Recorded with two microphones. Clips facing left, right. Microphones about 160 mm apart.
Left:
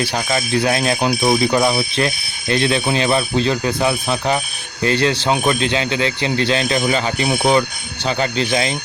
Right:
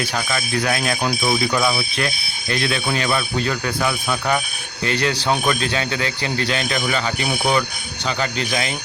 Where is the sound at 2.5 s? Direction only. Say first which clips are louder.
Left 5 dB; 25° left (ahead or behind).